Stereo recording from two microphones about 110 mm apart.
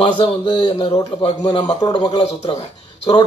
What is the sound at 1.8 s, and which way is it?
Speech, 40° left (ahead or behind).